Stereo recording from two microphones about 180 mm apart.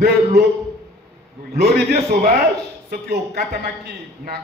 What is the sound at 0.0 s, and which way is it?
Speech, 65° right (ahead or behind).